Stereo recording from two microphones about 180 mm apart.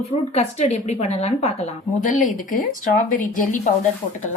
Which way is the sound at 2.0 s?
45° left (ahead or behind).